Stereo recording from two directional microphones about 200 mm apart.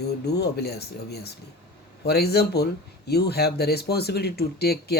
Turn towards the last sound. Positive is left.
turn(degrees=50)  # may be behind; listen again after turning